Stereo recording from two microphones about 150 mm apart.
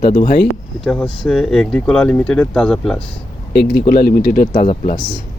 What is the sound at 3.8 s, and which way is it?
Speech, 80° left.